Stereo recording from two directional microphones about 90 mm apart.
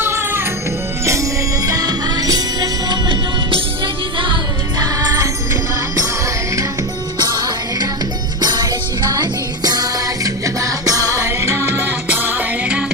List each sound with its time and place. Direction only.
0.0 s music: 25° right (ahead or behind); by 3.0 s 45° right (ahead or behind)
4.8 s music: 50° right (ahead or behind)
7.2 s music: 50° right (ahead or behind); by 12.8 s 20° right (ahead or behind)